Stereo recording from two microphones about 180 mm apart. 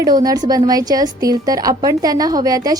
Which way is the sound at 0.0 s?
20° right (ahead or behind).